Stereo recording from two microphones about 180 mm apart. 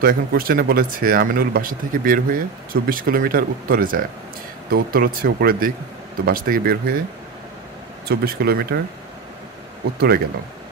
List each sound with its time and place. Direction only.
0.0 s speech: 55° right (ahead or behind)
8.1 s speech: 60° right (ahead or behind)
9.9 s speech: 60° right (ahead or behind)